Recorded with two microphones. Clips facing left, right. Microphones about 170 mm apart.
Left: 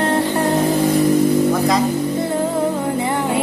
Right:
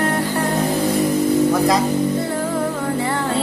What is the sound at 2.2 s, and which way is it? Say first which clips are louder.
Music: left 3 dB; 20° left (ahead or behind).